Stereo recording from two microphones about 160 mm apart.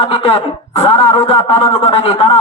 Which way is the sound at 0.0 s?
40° left (ahead or behind).